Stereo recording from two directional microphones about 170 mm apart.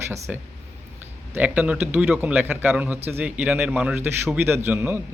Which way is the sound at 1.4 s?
10° right (ahead or behind).